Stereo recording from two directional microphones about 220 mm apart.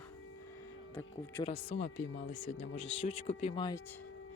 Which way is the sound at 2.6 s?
25° left (ahead or behind).